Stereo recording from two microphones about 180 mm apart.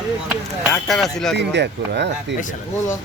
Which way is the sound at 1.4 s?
70° right (ahead or behind).